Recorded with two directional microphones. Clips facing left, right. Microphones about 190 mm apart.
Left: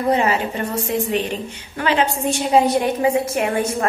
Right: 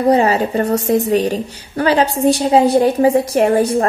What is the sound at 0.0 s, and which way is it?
A woman's voice, 35° right (ahead or behind).